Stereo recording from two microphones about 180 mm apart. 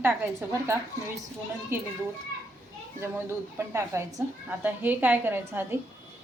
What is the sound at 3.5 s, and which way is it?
A woman's voice, 15° right (ahead or behind).